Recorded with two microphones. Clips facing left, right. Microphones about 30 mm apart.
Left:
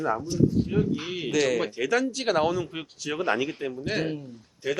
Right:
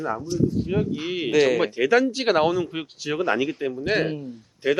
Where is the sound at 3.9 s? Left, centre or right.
Centre.